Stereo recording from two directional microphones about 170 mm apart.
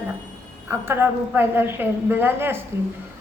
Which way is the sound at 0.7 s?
10° right (ahead or behind).